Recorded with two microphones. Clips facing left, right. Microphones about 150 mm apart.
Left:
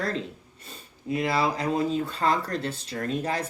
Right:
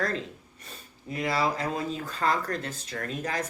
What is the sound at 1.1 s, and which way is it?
Speech, 25° left (ahead or behind).